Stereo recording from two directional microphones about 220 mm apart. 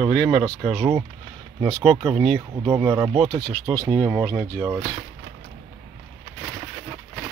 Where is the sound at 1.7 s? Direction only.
25° right (ahead or behind).